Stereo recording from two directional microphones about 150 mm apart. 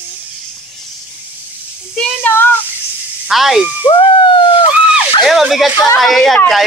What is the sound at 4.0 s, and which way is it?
Speech, 35° left (ahead or behind).